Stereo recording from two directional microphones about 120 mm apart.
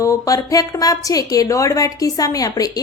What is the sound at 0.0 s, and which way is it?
A woman's voice, 25° left (ahead or behind).